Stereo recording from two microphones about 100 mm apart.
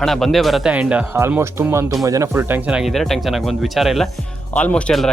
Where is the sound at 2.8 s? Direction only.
Centre (ahead or behind).